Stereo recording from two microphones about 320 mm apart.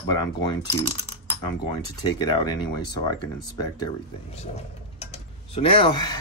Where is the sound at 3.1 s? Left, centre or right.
Centre.